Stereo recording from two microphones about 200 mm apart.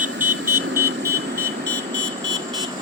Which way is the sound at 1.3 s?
60° right (ahead or behind).